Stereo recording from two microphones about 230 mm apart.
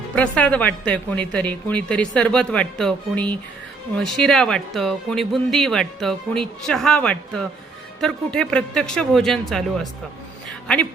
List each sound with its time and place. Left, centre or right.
0.2 s speech: centre